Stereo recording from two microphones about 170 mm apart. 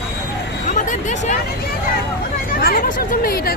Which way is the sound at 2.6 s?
60° left (ahead or behind).